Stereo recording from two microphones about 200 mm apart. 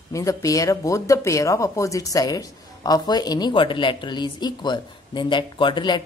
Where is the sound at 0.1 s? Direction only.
15° left (ahead or behind).